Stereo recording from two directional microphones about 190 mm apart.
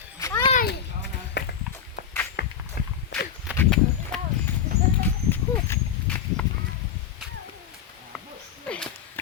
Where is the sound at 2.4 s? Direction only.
55° left (ahead or behind).